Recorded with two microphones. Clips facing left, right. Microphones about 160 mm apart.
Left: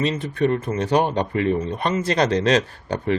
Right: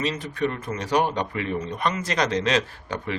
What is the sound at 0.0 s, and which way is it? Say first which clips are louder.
Speech: left 5 dB; 30° left (ahead or behind).